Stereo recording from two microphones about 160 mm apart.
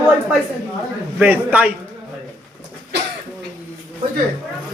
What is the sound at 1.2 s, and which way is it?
Speech, 10° right (ahead or behind).